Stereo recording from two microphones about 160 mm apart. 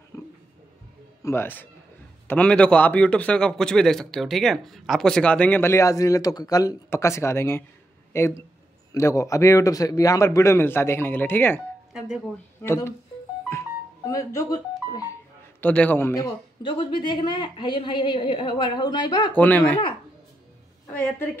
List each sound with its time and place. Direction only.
1.2 s a man's voice: 15° left (ahead or behind)
11.9 s speech: 5° right (ahead or behind)
12.6 s a man's voice: 15° left (ahead or behind)
13.5 s music: 15° left (ahead or behind)
15.6 s a man's voice: 10° left (ahead or behind); by 19.3 s 30° left (ahead or behind)
19.3 s a man's voice: 10° left (ahead or behind)